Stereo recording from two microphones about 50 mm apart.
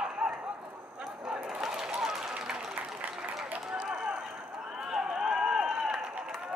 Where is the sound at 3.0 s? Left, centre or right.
Right.